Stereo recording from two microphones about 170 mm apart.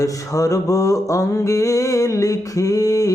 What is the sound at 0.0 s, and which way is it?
Mantra, 20° left (ahead or behind).